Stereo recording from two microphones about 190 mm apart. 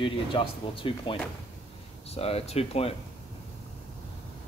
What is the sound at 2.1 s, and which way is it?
Speech, 30° left (ahead or behind).